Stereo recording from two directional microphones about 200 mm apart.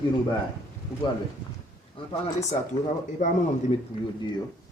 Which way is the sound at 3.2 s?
40° left (ahead or behind).